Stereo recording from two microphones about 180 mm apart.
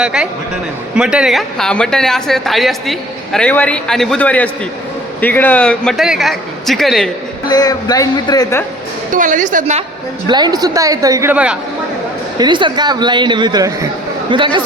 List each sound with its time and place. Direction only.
0.0 s a woman's voice: 5° right (ahead or behind)
7.4 s a man's voice: 20° left (ahead or behind)
9.1 s a woman's voice: 45° right (ahead or behind)
10.2 s speech: 25° right (ahead or behind)
12.4 s speech: 25° right (ahead or behind)